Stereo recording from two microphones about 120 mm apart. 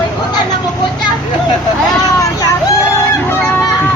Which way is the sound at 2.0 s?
35° left (ahead or behind).